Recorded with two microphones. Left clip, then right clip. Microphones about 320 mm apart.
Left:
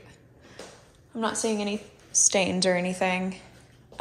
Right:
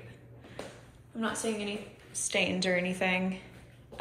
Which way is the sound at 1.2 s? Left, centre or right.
Centre.